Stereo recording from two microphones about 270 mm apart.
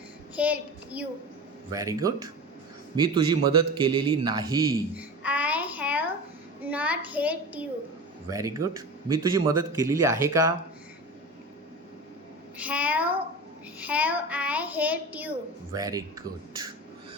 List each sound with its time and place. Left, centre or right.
0.3 s a child's voice: centre
3.8 s babbling: centre
6.6 s a child's voice: centre
12.5 s a child's voice: centre